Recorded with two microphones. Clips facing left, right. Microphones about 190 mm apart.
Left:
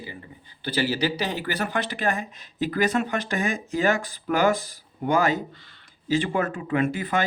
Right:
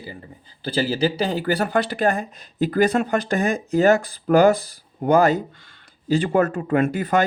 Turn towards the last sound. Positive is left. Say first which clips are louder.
# right 5 dB
turn(degrees=-40)  # may be behind; listen again after turning